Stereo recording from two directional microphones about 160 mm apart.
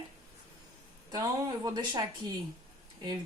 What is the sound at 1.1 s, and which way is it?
Speech, 25° right (ahead or behind).